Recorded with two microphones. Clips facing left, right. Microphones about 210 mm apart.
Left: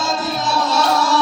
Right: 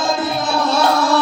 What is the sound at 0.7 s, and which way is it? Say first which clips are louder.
Music: right 2 dB; 55° right (ahead or behind).